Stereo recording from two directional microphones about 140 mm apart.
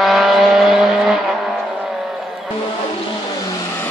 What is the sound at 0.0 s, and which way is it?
Vehicle, centre (ahead or behind).